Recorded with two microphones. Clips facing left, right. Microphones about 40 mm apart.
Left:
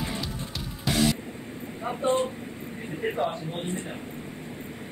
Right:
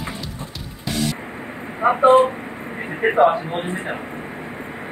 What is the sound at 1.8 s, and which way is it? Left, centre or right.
Speech, right.